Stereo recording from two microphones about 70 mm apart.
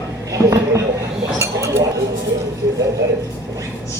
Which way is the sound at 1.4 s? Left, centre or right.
Right.